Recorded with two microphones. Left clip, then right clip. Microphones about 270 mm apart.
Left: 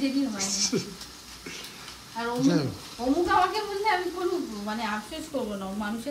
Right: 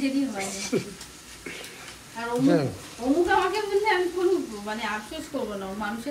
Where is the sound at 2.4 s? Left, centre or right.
Centre.